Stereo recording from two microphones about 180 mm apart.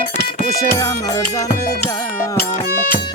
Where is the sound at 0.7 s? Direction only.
20° left (ahead or behind).